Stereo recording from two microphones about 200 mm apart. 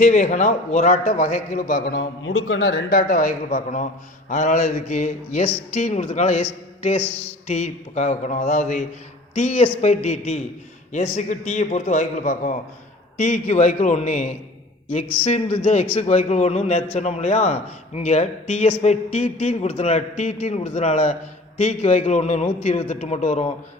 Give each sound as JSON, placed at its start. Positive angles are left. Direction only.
{"t": 0.0, "sound": "a man's voice", "side_deg": 35}
{"t": 2.0, "sound": "a man's voice", "side_deg": 80}
{"t": 2.9, "sound": "a man's voice", "side_deg": 45}